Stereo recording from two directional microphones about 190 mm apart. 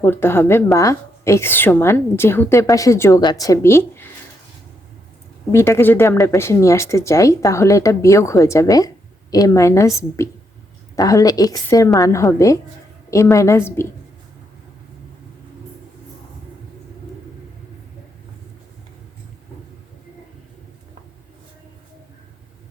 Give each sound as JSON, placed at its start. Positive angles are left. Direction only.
{"t": 0.0, "sound": "a woman's voice", "side_deg": 10}
{"t": 5.5, "sound": "a woman's voice", "side_deg": 15}